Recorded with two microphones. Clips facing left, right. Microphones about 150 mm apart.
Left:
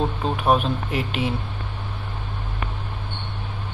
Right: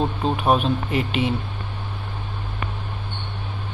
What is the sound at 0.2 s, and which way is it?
Speech, centre (ahead or behind).